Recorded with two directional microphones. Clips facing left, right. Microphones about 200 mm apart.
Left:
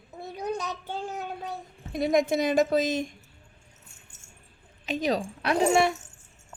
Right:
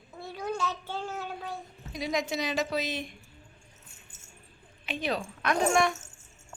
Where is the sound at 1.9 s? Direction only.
55° left (ahead or behind).